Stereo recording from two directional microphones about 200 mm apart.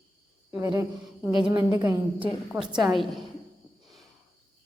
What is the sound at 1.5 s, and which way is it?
A woman's voice, 15° right (ahead or behind).